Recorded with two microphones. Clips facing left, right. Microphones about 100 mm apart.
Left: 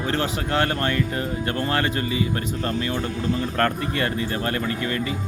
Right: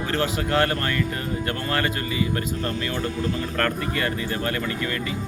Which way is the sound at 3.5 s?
25° left (ahead or behind).